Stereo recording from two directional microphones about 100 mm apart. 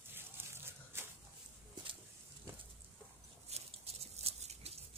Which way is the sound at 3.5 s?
90° right.